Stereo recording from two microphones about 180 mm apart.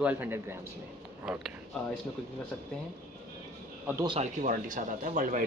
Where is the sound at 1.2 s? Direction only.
Centre (ahead or behind).